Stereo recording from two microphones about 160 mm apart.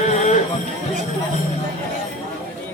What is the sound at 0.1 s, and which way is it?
Music, 50° left (ahead or behind).